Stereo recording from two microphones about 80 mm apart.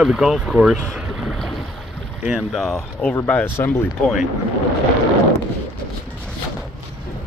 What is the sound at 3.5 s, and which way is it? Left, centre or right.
Speech, left.